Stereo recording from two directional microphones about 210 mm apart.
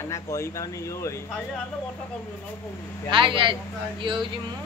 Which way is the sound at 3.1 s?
25° right (ahead or behind).